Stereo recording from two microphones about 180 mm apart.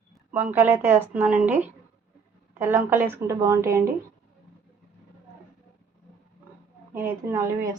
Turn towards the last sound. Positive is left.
turn(degrees=-20)  # may be behind; listen again after turning